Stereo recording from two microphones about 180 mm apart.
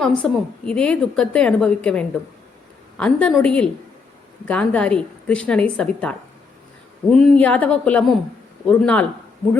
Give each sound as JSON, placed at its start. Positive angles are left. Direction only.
{"t": 0.0, "sound": "a woman's voice", "side_deg": 5}